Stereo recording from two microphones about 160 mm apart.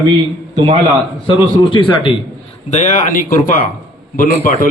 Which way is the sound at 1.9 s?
30° left (ahead or behind).